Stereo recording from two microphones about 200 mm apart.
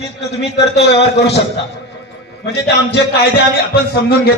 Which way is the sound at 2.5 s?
55° left (ahead or behind).